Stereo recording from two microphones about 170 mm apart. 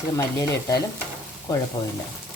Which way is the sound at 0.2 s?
20° left (ahead or behind).